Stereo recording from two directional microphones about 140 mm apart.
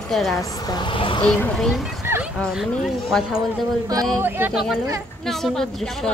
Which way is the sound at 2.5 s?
Centre (ahead or behind).